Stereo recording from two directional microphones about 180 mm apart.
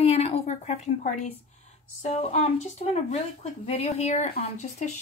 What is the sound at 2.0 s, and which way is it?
Speech, 35° left (ahead or behind).